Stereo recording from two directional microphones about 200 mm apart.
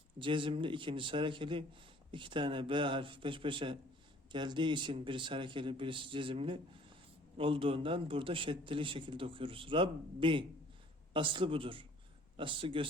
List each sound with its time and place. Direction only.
0.2 s a man's voice: 25° right (ahead or behind)